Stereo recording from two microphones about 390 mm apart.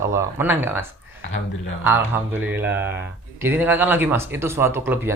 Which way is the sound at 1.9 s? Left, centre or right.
Centre.